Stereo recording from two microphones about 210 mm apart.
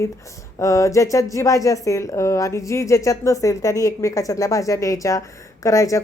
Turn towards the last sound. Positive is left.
turn(degrees=15)  # may be behind; listen again after turning